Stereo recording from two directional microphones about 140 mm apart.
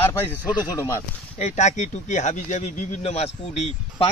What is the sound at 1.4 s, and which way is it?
Speech, 55° left (ahead or behind).